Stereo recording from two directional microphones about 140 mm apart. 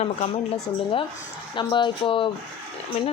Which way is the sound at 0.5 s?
40° left (ahead or behind).